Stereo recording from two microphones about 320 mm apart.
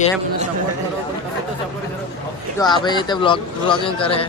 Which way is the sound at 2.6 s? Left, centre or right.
Centre.